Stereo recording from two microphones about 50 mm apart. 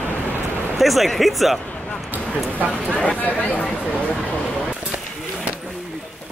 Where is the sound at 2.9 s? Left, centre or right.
Left.